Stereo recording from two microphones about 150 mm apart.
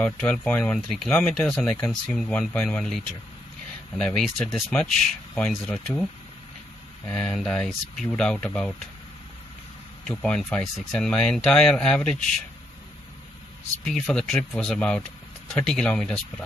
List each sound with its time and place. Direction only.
0.0 s speech: 10° left (ahead or behind)
7.1 s speech: 5° left (ahead or behind)
10.0 s speech: 5° left (ahead or behind)
13.8 s speech: 5° left (ahead or behind)